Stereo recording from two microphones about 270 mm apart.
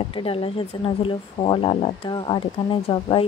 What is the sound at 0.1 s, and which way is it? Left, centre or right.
Speech, centre.